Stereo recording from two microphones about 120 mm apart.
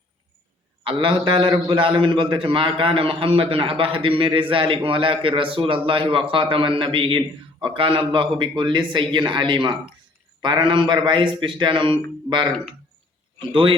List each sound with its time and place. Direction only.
0.9 s a man's voice: 45° right (ahead or behind)
13.5 s a man's voice: 45° right (ahead or behind)